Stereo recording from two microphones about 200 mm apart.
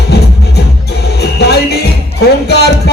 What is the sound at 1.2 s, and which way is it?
Music, 55° left (ahead or behind).